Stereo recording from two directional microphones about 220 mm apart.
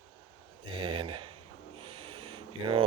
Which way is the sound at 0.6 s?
25° right (ahead or behind).